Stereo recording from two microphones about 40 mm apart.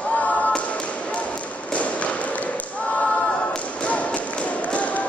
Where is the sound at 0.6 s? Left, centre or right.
Left.